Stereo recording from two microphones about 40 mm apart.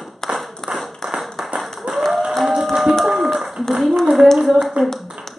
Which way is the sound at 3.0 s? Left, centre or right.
Centre.